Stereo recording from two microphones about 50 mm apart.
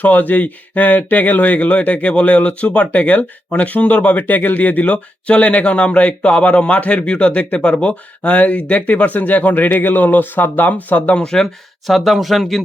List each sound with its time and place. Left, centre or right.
0.0 s a man's voice: left; by 11.4 s centre
11.9 s speech: centre